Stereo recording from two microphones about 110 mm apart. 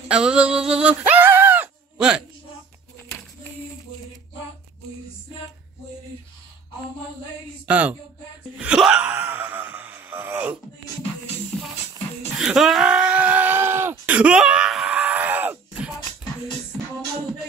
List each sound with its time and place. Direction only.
0.1 s bleat: 10° right (ahead or behind)
7.6 s speech: 15° right (ahead or behind)
8.5 s wail: 10° right (ahead or behind)
12.4 s a sound: 5° right (ahead or behind)